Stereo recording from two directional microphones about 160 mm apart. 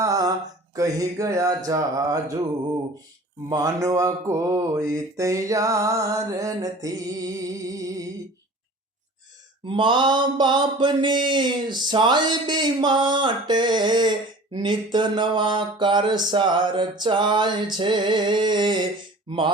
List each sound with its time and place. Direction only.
0.0 s a sound: 20° right (ahead or behind)
0.8 s mantra: 20° right (ahead or behind)
3.5 s mantra: 20° right (ahead or behind)
9.6 s mantra: 30° right (ahead or behind)
19.3 s speech: 30° right (ahead or behind)